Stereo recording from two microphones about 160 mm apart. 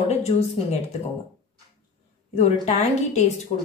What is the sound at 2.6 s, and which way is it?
Speech, 45° left (ahead or behind).